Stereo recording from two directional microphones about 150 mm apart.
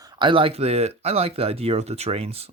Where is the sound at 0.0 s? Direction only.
30° right (ahead or behind).